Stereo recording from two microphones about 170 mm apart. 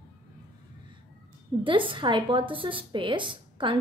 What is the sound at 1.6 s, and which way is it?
A woman's voice, 30° right (ahead or behind).